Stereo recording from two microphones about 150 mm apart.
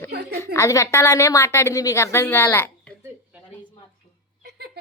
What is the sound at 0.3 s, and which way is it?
A woman's voice, 20° left (ahead or behind).